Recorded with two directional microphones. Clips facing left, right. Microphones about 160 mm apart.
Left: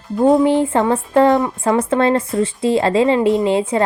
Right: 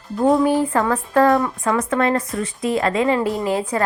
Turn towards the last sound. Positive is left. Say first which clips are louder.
# left 5 dB
turn(degrees=25)  # may be behind; listen again after turning